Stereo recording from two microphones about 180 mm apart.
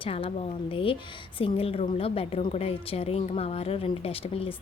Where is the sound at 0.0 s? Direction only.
30° left (ahead or behind).